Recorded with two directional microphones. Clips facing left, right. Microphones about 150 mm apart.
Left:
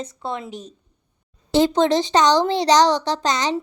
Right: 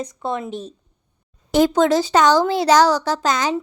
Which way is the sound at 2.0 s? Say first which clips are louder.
Right 1 dB; 5° right (ahead or behind).